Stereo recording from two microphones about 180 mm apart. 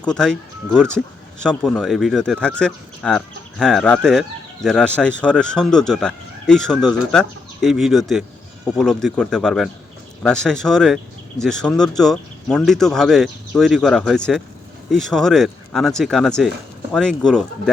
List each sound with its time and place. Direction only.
0.0 s speech: 5° left (ahead or behind)